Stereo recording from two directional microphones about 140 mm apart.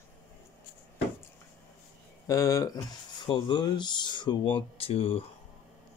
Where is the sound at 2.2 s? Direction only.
25° left (ahead or behind).